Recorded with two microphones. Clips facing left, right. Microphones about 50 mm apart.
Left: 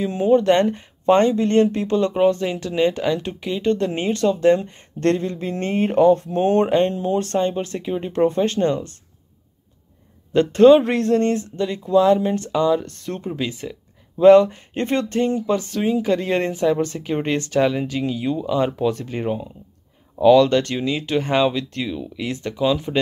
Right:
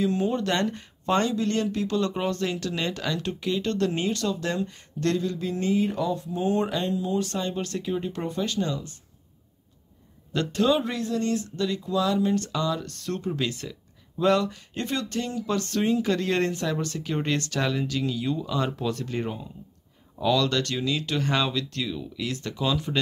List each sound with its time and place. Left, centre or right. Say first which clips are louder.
0.0 s speech: left 8 dB; left
7.5 s speech: left 4 dB; left
8.1 s speech: left 11 dB; left
10.3 s speech: left 12 dB; left
11.2 s speech: left 5 dB; left
15.4 s speech: left 4 dB; centre